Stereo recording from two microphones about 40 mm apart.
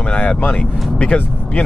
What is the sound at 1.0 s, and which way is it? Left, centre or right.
Speech, left.